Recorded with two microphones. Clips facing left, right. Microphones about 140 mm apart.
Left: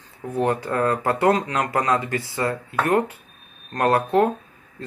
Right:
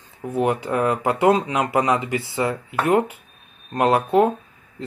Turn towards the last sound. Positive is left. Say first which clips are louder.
# right 2 dB
turn(degrees=-15)  # may be behind; listen again after turning